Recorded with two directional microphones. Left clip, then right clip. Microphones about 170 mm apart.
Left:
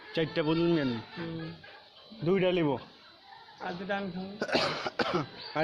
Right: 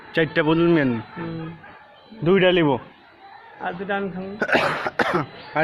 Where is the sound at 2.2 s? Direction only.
15° right (ahead or behind).